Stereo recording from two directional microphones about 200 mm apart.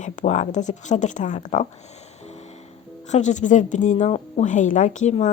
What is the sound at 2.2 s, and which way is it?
Music, 35° left (ahead or behind).